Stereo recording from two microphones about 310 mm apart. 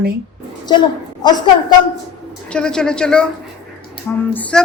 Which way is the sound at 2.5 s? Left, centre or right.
Centre.